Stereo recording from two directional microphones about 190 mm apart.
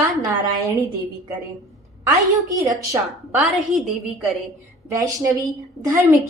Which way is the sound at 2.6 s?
20° right (ahead or behind).